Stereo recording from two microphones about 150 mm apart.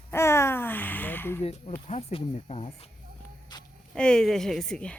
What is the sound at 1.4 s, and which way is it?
Speech, 45° left (ahead or behind).